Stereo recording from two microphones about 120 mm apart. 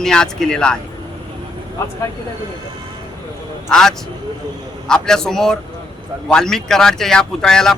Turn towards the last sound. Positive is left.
turn(degrees=5)  # may be behind; listen again after turning